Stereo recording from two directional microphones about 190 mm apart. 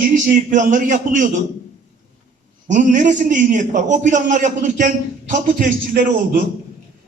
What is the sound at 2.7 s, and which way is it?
A man's voice, 40° right (ahead or behind).